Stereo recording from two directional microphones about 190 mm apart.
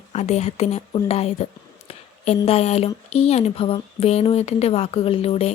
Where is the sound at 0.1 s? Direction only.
35° left (ahead or behind).